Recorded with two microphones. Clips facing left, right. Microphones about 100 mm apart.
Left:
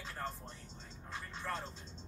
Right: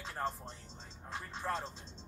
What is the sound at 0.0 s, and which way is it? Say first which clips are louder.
Speech: right 4 dB; 25° right (ahead or behind).